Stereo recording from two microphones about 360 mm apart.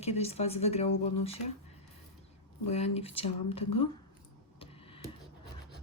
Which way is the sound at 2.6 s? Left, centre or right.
Centre.